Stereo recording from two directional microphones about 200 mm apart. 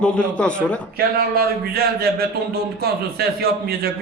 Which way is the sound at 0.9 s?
50° right (ahead or behind).